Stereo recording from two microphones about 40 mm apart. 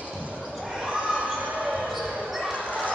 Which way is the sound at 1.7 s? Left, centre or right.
Centre.